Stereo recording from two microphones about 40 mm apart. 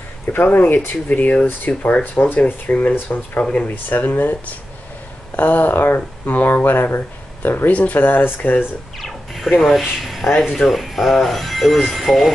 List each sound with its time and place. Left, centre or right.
0.3 s speech: left
1.9 s speech: left
2.2 s speech: left
5.7 s speech: left
6.3 s speech: left
9.0 s speech: centre